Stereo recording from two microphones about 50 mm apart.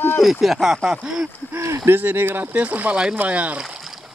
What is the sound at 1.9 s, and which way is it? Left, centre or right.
Speech, right.